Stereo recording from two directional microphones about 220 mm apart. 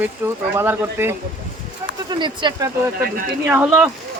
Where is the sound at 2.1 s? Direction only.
20° right (ahead or behind).